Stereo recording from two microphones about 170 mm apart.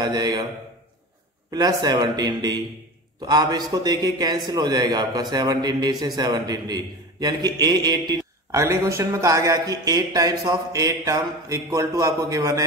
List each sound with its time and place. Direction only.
0.0 s speech: 25° right (ahead or behind)
1.5 s speech: 25° right (ahead or behind)